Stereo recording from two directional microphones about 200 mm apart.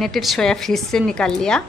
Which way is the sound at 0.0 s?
Centre (ahead or behind).